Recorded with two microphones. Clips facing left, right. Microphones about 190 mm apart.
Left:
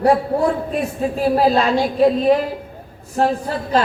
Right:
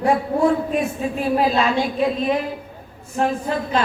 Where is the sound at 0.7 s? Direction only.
35° left (ahead or behind).